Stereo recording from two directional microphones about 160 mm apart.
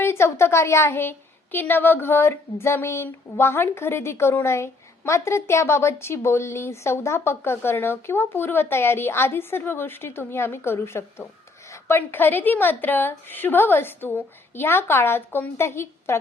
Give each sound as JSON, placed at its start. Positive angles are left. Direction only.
{"t": 0.0, "sound": "a woman's voice", "side_deg": 15}